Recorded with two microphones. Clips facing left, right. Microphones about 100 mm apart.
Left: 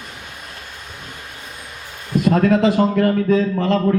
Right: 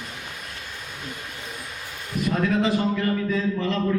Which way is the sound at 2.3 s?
55° left (ahead or behind).